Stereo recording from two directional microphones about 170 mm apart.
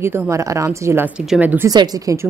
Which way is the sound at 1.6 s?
20° right (ahead or behind).